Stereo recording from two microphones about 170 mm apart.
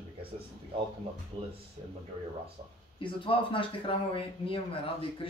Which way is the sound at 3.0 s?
30° left (ahead or behind).